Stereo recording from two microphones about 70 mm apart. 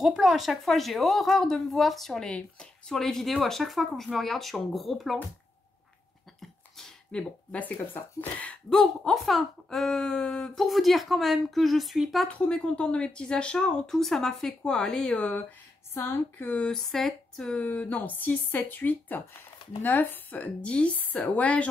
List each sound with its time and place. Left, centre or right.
0.0 s speech: centre
7.1 s a woman's voice: centre
8.6 s speech: centre
10.6 s speech: centre
12.3 s speech: centre
15.9 s a woman's voice: left
16.5 s speech: centre
17.6 s a woman's voice: left